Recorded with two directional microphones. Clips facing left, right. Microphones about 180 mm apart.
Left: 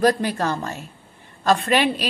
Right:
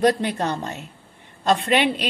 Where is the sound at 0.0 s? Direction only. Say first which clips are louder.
Even; 20° right (ahead or behind).